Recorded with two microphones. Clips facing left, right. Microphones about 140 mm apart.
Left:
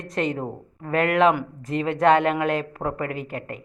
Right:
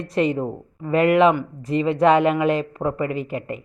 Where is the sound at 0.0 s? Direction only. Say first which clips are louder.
Right 5 dB; centre (ahead or behind).